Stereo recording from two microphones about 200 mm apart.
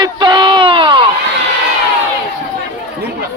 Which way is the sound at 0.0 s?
25° right (ahead or behind).